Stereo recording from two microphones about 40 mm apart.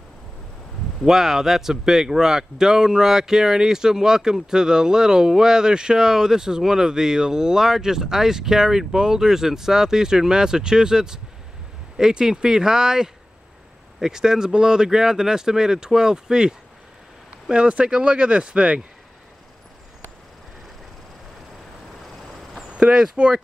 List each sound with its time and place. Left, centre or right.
1.0 s speech: centre; by 18.8 s right
22.7 s speech: right